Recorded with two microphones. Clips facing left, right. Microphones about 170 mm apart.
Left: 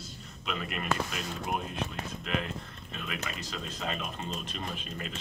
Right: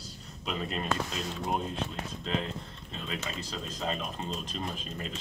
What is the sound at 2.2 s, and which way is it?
Speech, 25° right (ahead or behind).